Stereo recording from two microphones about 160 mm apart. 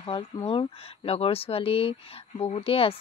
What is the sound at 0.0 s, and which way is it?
Speech, 35° left (ahead or behind).